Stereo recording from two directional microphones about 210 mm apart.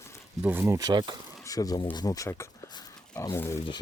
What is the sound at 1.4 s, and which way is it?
Speech, 15° left (ahead or behind).